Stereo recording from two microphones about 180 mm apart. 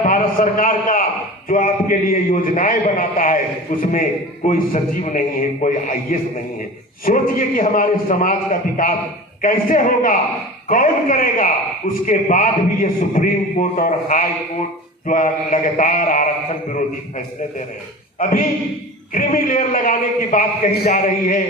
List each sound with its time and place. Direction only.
0.0 s a man's voice: 50° left (ahead or behind)
18.2 s a man's voice: 50° left (ahead or behind)